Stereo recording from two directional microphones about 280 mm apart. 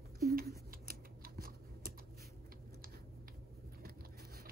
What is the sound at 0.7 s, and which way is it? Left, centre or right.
Scissors, right.